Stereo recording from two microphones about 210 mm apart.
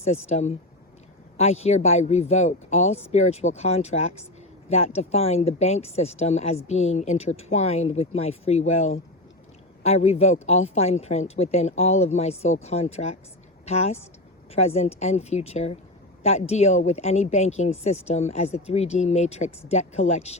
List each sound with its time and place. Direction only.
0.3 s speech: 30° left (ahead or behind)